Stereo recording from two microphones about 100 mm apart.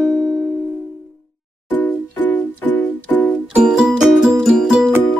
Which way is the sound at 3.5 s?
5° right (ahead or behind).